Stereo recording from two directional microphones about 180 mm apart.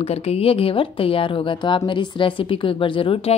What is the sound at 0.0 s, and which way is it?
A woman's voice, 35° left (ahead or behind).